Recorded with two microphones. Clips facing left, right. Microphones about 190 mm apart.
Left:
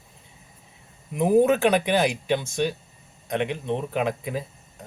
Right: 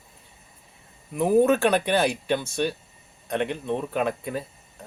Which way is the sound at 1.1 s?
15° left (ahead or behind).